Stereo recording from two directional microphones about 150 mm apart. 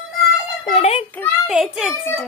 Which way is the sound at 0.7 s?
45° left (ahead or behind).